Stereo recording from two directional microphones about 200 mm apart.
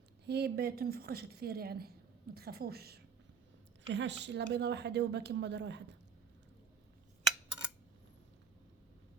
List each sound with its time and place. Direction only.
0.3 s a woman's voice: 55° right (ahead or behind)
3.8 s speech: 65° right (ahead or behind)